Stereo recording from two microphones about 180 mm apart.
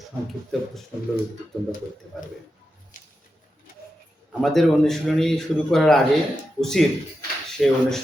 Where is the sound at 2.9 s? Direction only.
50° left (ahead or behind).